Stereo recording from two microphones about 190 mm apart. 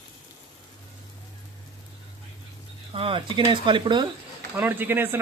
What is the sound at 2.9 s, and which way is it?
Speech, 30° right (ahead or behind).